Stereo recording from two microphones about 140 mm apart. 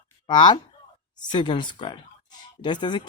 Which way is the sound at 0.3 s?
35° left (ahead or behind).